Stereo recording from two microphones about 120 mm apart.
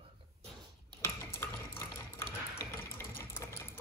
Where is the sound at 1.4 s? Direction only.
20° left (ahead or behind).